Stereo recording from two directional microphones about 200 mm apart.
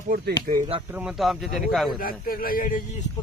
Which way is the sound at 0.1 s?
45° right (ahead or behind).